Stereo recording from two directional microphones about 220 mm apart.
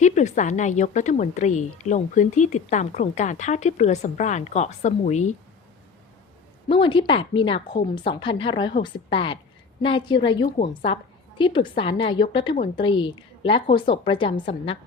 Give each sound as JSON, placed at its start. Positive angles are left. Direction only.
{"t": 0.0, "sound": "a woman's voice", "side_deg": 35}
{"t": 6.7, "sound": "a woman's voice", "side_deg": 25}